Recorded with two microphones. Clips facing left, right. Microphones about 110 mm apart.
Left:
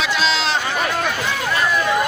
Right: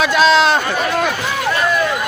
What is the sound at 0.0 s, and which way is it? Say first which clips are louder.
Speech: right 8 dB; 50° right (ahead or behind).